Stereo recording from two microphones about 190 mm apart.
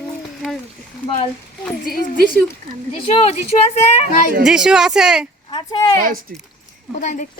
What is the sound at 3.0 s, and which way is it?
Speech, 35° left (ahead or behind).